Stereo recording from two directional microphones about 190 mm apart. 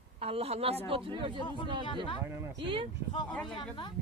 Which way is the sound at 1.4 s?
25° left (ahead or behind).